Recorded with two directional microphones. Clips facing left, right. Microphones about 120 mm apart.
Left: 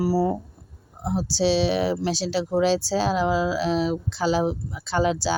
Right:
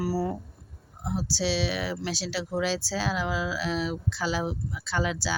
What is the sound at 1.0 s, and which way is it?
Speech, 25° left (ahead or behind).